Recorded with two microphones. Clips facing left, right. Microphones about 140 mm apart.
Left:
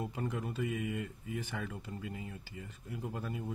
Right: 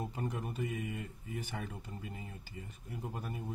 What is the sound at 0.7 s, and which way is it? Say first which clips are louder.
Speech: left 3 dB; 90° left.